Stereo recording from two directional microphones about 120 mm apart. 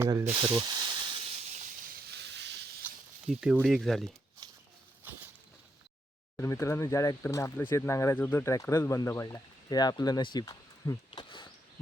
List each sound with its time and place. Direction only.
0.0 s speech: 25° right (ahead or behind)
0.5 s snake: 40° right (ahead or behind); by 1.6 s 65° right (ahead or behind)
3.2 s speech: 5° right (ahead or behind)
4.4 s a sound: 30° right (ahead or behind)
5.0 s a sound: 15° right (ahead or behind)
6.3 s speech: 25° left (ahead or behind); by 11.4 s 40° left (ahead or behind)